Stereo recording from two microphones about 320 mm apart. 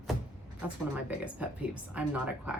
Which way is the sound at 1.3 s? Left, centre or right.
Centre.